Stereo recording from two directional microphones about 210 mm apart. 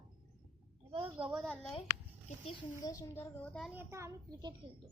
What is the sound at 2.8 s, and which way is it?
Speech, 15° left (ahead or behind).